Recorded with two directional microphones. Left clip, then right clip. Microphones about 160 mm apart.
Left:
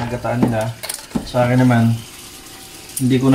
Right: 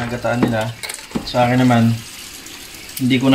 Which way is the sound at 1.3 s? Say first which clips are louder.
Right 1 dB; 25° right (ahead or behind).